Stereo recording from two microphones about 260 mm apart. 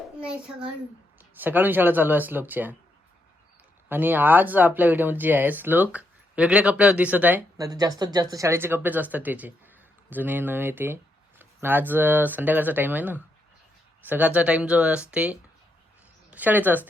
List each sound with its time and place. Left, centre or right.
0.2 s a child's voice: centre
3.8 s speech: centre